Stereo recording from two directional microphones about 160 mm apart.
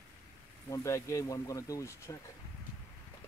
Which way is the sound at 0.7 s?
20° left (ahead or behind).